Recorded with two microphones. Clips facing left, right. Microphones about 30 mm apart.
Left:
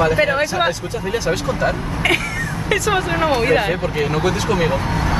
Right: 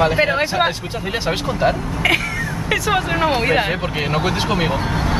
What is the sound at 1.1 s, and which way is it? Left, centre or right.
Speech, right.